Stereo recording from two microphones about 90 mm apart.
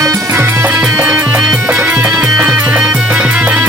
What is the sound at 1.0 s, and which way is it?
Music, 15° right (ahead or behind).